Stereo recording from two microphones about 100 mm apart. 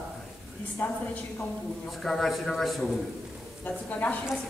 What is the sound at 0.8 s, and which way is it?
Speech, 20° left (ahead or behind).